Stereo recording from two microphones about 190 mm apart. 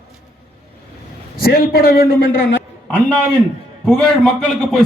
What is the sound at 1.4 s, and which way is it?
Speech, 50° left (ahead or behind).